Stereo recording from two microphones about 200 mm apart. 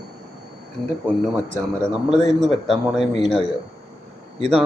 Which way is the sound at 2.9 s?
Centre (ahead or behind).